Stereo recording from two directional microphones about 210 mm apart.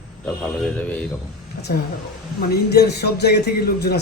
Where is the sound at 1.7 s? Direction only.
45° left (ahead or behind).